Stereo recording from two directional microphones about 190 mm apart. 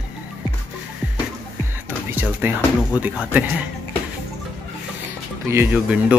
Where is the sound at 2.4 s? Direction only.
10° right (ahead or behind).